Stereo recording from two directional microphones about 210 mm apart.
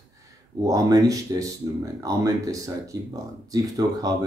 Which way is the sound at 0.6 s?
15° right (ahead or behind).